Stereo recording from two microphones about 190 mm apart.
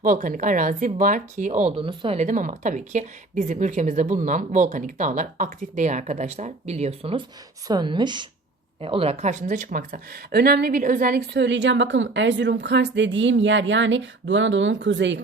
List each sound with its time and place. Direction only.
0.0 s speech: 45° right (ahead or behind)
1.7 s a woman's voice: 25° right (ahead or behind); by 11.2 s 45° right (ahead or behind)
11.3 s speech: 70° right (ahead or behind)